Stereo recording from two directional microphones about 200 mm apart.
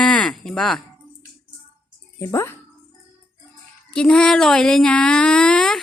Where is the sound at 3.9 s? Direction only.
5° left (ahead or behind).